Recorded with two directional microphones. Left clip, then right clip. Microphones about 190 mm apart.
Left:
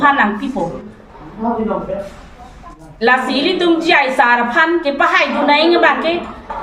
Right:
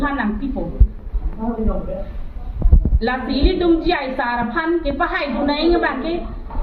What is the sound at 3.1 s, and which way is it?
Speech, 45° left (ahead or behind).